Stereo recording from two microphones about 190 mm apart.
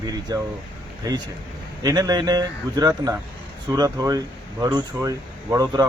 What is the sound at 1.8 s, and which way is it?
Speech, 20° right (ahead or behind).